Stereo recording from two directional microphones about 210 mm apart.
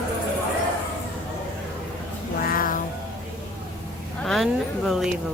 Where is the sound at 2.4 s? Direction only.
45° left (ahead or behind).